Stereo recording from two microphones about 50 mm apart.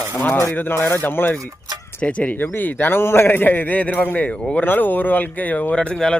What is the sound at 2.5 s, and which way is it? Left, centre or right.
A man's voice, left.